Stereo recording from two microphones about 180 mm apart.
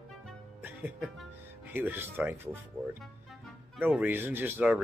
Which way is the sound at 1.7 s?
10° right (ahead or behind).